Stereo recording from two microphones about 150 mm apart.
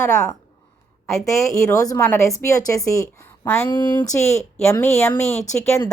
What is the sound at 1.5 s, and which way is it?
A woman's voice, 20° left (ahead or behind).